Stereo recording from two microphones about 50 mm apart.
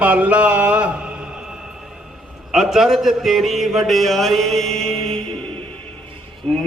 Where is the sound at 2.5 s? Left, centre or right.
Centre.